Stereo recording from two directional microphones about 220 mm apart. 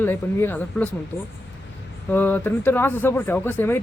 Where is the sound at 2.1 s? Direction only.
10° left (ahead or behind).